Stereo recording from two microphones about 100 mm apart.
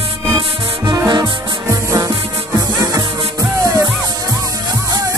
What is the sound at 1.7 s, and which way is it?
Music, 35° right (ahead or behind).